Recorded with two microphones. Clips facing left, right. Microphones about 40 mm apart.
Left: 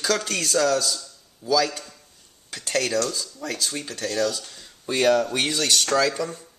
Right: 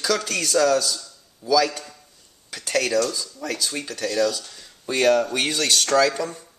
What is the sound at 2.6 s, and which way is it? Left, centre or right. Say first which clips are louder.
Speech: right 2 dB; centre.